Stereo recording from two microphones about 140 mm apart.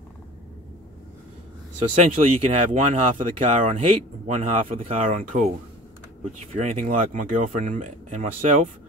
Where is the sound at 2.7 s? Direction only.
65° right (ahead or behind).